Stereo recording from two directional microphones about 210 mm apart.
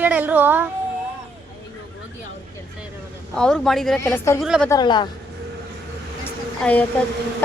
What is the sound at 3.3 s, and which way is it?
Speech, 5° left (ahead or behind).